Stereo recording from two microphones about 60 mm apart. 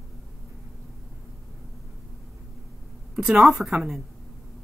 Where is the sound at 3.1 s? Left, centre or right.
Centre.